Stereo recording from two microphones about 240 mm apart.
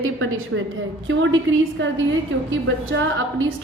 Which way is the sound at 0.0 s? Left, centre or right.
Right.